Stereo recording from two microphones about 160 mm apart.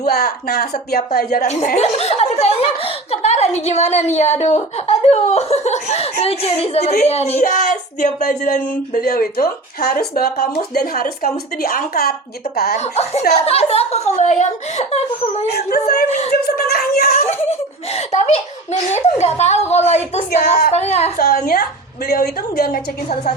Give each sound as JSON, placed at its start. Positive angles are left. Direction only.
{"t": 0.0, "sound": "a woman's voice", "side_deg": 75}
{"t": 1.5, "sound": "speech", "side_deg": 45}
{"t": 12.7, "sound": "a woman's voice", "side_deg": 45}
{"t": 15.5, "sound": "a woman's voice", "side_deg": 75}
{"t": 16.0, "sound": "speech", "side_deg": 45}
{"t": 16.6, "sound": "a woman's voice", "side_deg": 70}
{"t": 17.9, "sound": "speech", "side_deg": 45}
{"t": 21.2, "sound": "a woman's voice", "side_deg": 70}